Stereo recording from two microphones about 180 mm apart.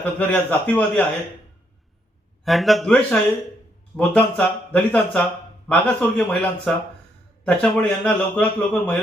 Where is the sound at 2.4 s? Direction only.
Centre (ahead or behind).